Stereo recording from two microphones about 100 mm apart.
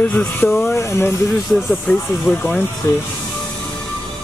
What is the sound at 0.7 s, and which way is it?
Speech, 30° left (ahead or behind).